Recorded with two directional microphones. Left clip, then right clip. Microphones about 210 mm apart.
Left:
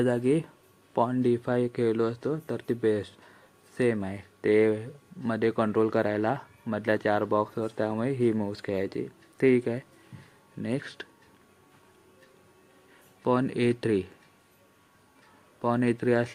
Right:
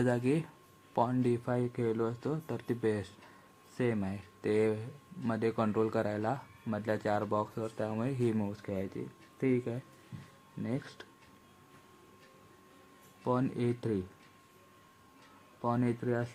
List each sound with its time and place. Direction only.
0.0 s speech: 10° left (ahead or behind)
8.6 s speech: 20° left (ahead or behind)
13.2 s speech: 10° left (ahead or behind)
15.6 s speech: 10° left (ahead or behind)
15.9 s speech: 35° left (ahead or behind)